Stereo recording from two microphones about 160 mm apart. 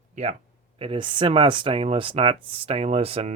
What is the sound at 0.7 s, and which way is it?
Speech, 35° right (ahead or behind).